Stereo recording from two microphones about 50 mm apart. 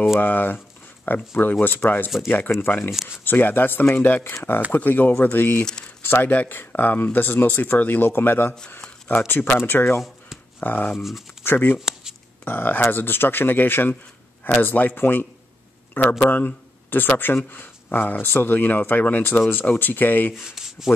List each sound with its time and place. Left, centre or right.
0.2 s speech: left
11.0 s speech: centre
11.4 s speech: left
11.8 s a sound: centre
12.4 s speech: left
20.3 s speech: centre